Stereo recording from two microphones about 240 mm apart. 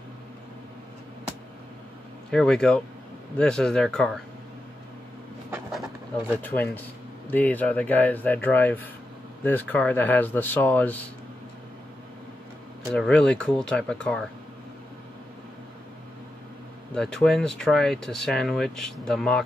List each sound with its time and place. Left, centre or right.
2.3 s speech: centre
6.4 s speech: centre
12.9 s speech: centre
16.9 s speech: centre